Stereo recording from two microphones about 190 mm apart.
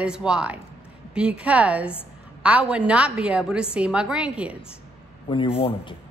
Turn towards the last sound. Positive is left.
turn(degrees=30)  # may be behind; listen again after turning